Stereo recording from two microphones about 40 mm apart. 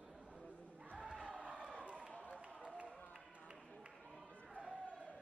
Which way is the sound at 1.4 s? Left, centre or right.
Right.